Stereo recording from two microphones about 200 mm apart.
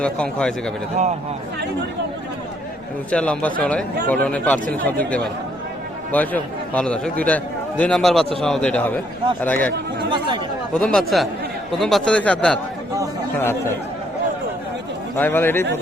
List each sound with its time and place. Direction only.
0.0 s a man's voice: 5° left (ahead or behind)
3.1 s a man's voice: 5° left (ahead or behind)
10.1 s speech: 20° right (ahead or behind)
10.8 s a man's voice: 5° left (ahead or behind)
15.1 s speech: 10° left (ahead or behind)